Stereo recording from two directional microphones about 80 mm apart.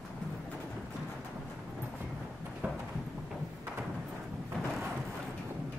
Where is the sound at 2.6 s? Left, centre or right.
Right.